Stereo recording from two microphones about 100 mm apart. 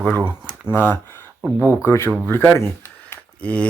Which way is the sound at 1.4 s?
15° right (ahead or behind).